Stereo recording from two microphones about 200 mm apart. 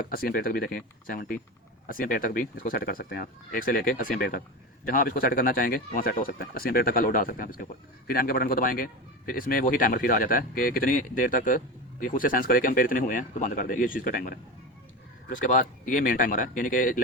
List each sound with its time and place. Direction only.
0.0 s speech: 45° left (ahead or behind)